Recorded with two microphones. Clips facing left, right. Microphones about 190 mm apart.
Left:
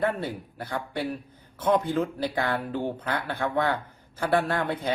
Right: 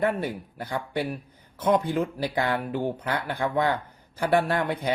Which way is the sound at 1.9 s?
15° right (ahead or behind).